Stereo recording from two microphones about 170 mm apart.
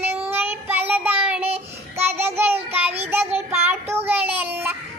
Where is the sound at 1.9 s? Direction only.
15° right (ahead or behind).